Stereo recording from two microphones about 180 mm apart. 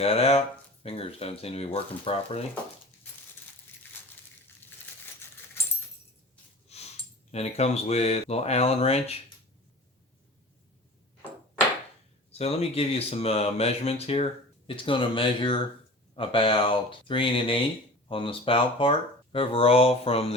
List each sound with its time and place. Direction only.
0.0 s speech: 35° left (ahead or behind)
5.6 s keys jangling: 15° left (ahead or behind)
6.7 s a sound: 35° left (ahead or behind)
7.3 s speech: 35° left (ahead or behind)
12.3 s speech: 35° left (ahead or behind)